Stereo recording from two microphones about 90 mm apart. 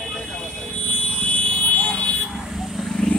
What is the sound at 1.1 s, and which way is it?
Car alarm, 15° left (ahead or behind).